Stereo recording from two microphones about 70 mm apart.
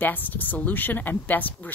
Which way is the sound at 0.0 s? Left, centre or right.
Left.